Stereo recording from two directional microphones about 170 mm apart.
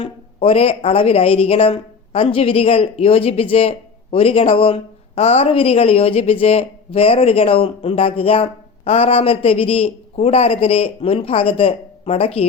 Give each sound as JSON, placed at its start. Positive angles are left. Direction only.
{"t": 0.0, "sound": "speech", "side_deg": 35}